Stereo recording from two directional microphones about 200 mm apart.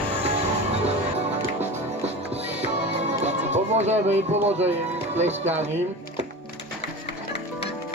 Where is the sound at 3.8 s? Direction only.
35° right (ahead or behind).